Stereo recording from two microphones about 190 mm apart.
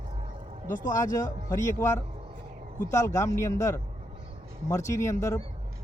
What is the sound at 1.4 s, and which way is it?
Speech, 15° left (ahead or behind).